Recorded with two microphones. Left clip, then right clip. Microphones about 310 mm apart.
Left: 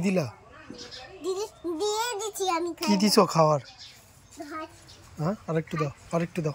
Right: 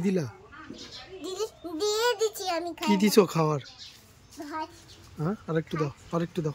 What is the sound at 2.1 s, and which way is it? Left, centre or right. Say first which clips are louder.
Child singing: right 6 dB; right.